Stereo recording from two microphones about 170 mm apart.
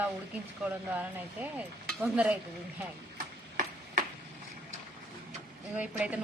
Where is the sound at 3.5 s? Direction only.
55° right (ahead or behind).